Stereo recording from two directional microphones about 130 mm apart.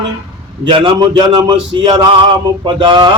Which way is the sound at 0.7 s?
35° right (ahead or behind).